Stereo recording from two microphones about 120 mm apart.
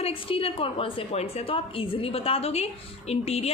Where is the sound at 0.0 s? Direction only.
50° left (ahead or behind).